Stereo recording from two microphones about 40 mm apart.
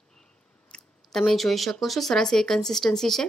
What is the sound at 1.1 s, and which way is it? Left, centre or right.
Speech, centre.